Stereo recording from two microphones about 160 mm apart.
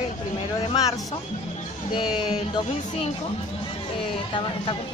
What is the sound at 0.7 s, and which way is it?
Speech, 20° left (ahead or behind).